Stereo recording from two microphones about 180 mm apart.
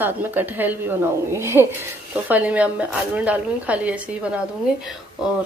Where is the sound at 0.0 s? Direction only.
10° right (ahead or behind).